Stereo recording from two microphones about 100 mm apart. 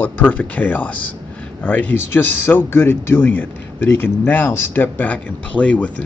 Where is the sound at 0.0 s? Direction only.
15° left (ahead or behind).